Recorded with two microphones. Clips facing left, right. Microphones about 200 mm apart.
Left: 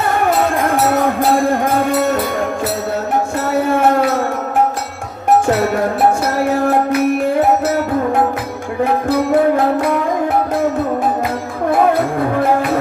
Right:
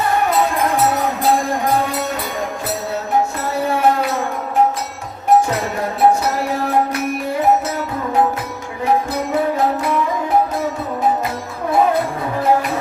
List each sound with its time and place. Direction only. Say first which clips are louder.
0.7 s music: left 3 dB; 50° left (ahead or behind)
9.3 s music: left 3 dB; 55° left (ahead or behind)